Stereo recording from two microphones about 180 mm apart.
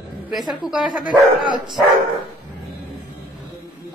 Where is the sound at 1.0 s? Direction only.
50° left (ahead or behind).